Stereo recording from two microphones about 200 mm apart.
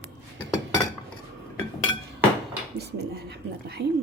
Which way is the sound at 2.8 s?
55° right (ahead or behind).